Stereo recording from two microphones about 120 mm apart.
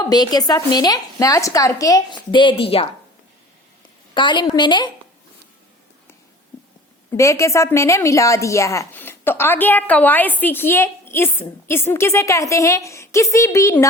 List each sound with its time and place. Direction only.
0.1 s a woman's voice: 35° left (ahead or behind); by 2.8 s 50° left (ahead or behind)
4.1 s a woman's voice: 40° left (ahead or behind)
7.2 s a woman's voice: 25° left (ahead or behind)